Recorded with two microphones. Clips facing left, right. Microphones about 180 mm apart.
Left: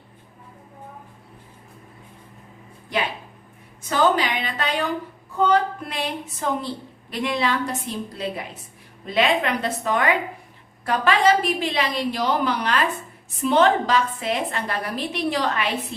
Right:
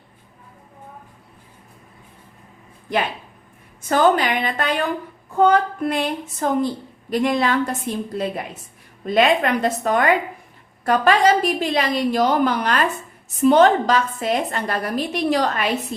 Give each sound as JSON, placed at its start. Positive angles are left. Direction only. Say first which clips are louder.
{"t": 3.8, "sound": "a woman's voice", "louder": "right 3 dB", "side_deg": -50}